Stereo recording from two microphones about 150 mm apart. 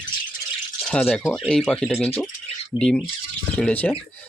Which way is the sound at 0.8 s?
5° left (ahead or behind).